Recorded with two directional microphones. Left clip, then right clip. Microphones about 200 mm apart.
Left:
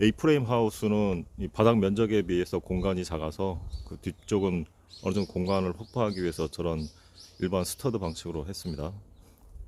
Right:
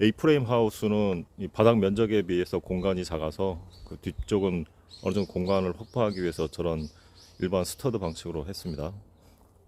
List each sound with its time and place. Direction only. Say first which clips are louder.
0.0 s speech: right 1 dB; centre (ahead or behind)